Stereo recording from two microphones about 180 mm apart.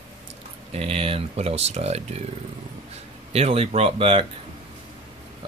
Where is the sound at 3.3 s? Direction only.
35° right (ahead or behind).